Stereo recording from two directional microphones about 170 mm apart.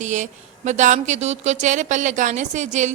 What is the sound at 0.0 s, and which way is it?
A woman's voice, 45° right (ahead or behind).